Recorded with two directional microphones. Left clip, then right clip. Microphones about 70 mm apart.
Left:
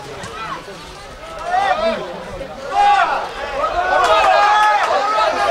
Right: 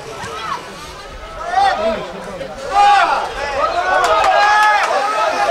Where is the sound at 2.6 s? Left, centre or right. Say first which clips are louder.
Right 2 dB; right.